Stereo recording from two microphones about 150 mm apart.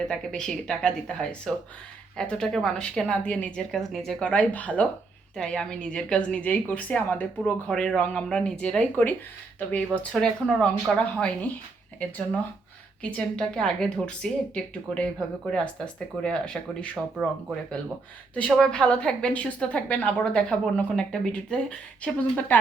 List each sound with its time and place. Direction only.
0.1 s a woman's voice: 5° left (ahead or behind)
18.3 s a woman's voice: 5° left (ahead or behind)